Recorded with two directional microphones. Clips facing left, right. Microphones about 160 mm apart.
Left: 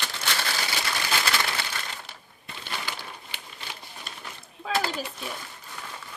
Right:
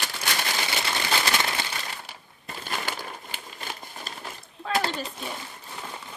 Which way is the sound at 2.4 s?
45° right (ahead or behind).